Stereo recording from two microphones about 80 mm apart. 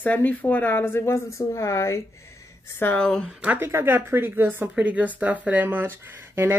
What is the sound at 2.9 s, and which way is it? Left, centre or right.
Speech, centre.